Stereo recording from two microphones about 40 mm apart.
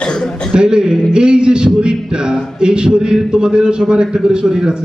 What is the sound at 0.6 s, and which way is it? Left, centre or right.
Speech, centre.